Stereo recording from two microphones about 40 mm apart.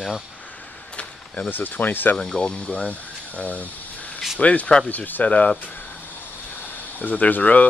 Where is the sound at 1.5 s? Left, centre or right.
Left.